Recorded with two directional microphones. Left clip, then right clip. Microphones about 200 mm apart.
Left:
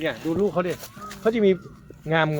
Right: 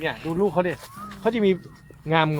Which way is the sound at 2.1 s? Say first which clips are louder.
Right 1 dB; 25° right (ahead or behind).